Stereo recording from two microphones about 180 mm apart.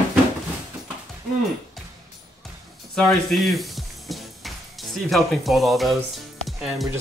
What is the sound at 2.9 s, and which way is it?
Music, centre (ahead or behind).